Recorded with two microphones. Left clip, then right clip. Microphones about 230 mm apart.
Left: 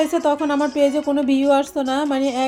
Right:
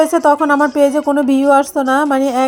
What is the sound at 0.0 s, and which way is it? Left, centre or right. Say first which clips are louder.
Speech: right 7 dB; right.